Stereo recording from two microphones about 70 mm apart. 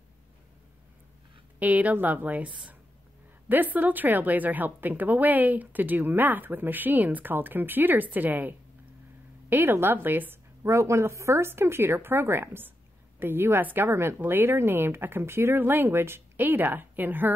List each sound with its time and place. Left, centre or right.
1.6 s a woman's voice: right
10.6 s a woman's voice: right